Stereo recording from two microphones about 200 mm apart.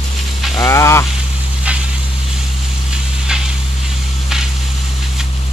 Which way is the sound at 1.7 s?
5° right (ahead or behind).